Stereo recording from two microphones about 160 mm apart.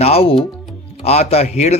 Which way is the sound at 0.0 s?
40° left (ahead or behind).